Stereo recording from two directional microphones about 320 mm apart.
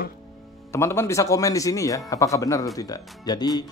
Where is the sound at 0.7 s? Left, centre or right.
Centre.